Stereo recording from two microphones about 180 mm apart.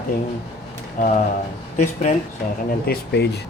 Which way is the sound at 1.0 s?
45° left (ahead or behind).